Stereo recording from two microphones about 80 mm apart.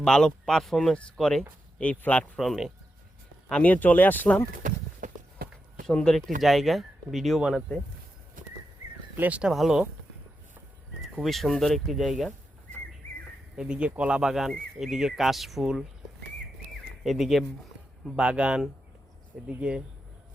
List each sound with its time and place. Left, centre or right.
0.0 s speech: centre
1.8 s speech: centre
2.4 s speech: centre
3.5 s speech: centre
5.8 s speech: centre
9.1 s speech: centre
9.5 s speech: centre
11.1 s speech: centre
13.6 s speech: centre
17.0 s speech: centre
18.2 s speech: centre